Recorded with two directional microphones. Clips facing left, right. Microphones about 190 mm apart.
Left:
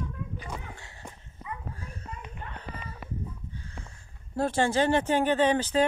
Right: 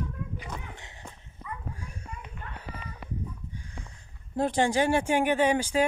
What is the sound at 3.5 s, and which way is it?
Speech, 15° right (ahead or behind).